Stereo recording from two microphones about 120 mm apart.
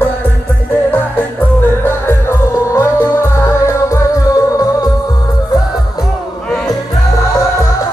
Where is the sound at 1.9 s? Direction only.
20° left (ahead or behind).